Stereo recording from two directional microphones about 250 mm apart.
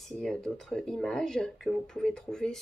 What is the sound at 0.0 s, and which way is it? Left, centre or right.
Speech, centre.